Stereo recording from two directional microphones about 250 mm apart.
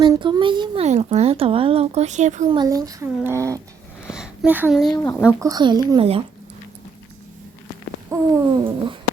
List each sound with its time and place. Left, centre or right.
0.0 s a child's voice: centre
2.6 s speech: centre
5.4 s speech: centre
8.1 s speech: centre